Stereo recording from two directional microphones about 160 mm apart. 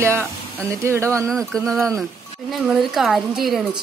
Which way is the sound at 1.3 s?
5° left (ahead or behind).